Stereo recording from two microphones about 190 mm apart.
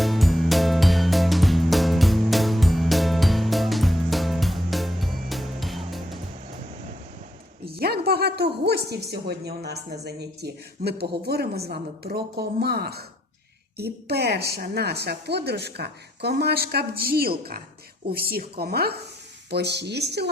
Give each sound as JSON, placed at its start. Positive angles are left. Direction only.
{"t": 0.0, "sound": "music", "side_deg": 0}
{"t": 7.8, "sound": "speech", "side_deg": -55}